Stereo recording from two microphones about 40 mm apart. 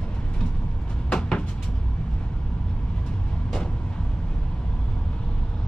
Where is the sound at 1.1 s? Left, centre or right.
Left.